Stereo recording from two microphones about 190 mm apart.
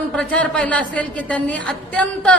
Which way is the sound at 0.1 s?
5° left (ahead or behind).